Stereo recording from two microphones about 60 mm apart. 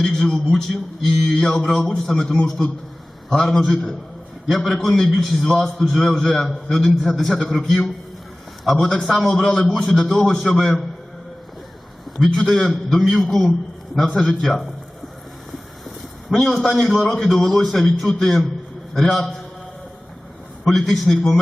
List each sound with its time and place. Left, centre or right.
0.0 s a man's voice: centre
12.1 s a man's voice: centre
16.3 s a man's voice: centre
20.7 s a man's voice: centre